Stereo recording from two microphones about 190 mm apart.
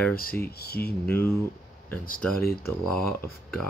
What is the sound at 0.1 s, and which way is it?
Speech, 50° left (ahead or behind).